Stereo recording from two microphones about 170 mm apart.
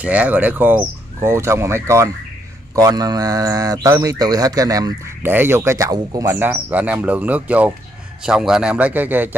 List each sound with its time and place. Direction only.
0.0 s speech: 10° right (ahead or behind)